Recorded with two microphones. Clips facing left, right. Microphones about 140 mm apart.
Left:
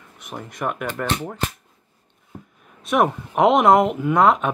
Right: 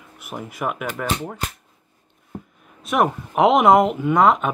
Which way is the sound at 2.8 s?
Centre (ahead or behind).